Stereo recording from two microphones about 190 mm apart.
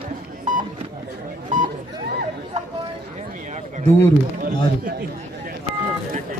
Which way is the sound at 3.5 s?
40° right (ahead or behind).